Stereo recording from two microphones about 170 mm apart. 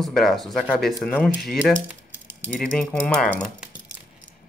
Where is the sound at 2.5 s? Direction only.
5° left (ahead or behind).